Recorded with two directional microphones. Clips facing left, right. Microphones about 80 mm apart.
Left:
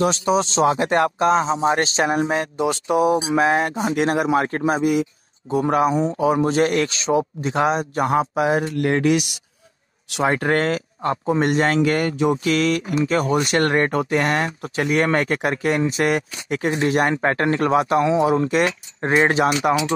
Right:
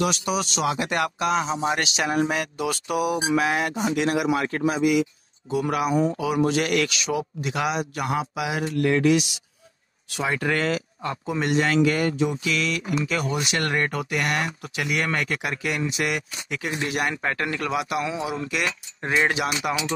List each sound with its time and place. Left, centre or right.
0.0 s speech: left
10.2 s speech: left